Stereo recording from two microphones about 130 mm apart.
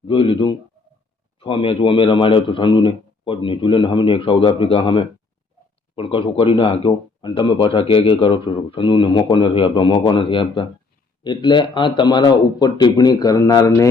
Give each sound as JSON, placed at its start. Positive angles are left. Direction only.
{"t": 0.1, "sound": "speech", "side_deg": 40}